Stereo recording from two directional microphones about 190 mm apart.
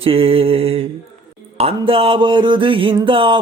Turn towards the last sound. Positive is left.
turn(degrees=-25)  # may be behind; listen again after turning